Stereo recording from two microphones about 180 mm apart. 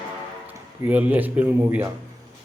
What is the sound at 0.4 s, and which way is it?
Speech, 10° right (ahead or behind).